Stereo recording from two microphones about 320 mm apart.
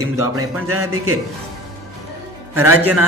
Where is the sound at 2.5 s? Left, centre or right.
Centre.